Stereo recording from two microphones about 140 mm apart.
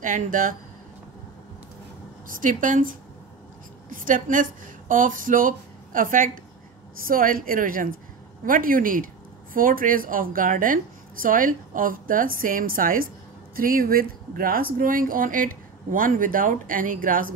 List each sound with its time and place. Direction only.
0.0 s a woman's voice: 70° right (ahead or behind)
2.2 s a woman's voice: 70° right (ahead or behind)
7.1 s speech: 90° right